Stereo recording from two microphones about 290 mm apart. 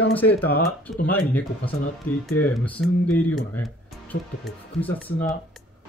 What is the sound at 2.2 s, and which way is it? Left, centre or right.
Speech, centre.